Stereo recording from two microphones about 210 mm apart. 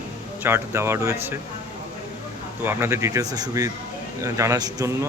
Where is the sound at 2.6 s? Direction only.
10° right (ahead or behind).